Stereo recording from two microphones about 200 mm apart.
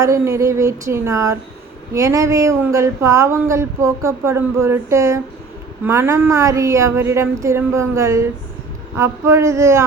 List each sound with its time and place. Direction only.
0.0 s speech: 15° right (ahead or behind)